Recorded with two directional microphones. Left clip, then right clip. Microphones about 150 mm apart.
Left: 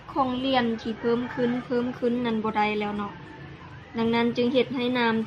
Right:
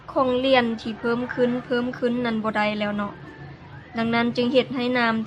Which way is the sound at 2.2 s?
90° right.